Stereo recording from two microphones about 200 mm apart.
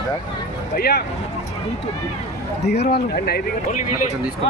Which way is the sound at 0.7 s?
50° left (ahead or behind).